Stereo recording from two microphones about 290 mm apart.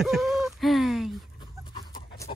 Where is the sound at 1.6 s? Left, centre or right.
Centre.